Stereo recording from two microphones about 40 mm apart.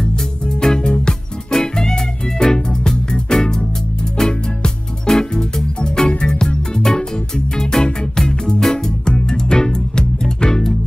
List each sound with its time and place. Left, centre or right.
0.6 s music: centre
8.5 s music: centre
9.0 s music: left